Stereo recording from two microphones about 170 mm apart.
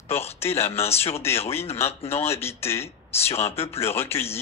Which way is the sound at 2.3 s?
15° left (ahead or behind).